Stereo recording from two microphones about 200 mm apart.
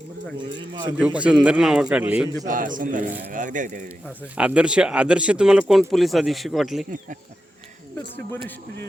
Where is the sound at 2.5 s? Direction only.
40° right (ahead or behind).